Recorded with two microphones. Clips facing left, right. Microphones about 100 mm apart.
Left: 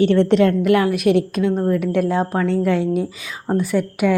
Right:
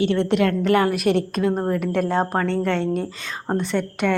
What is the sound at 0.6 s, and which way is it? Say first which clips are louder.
Speech: left 2 dB; centre (ahead or behind).